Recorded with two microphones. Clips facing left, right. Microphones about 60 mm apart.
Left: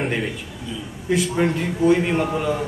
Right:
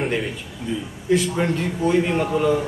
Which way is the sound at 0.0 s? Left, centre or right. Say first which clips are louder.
Even; centre.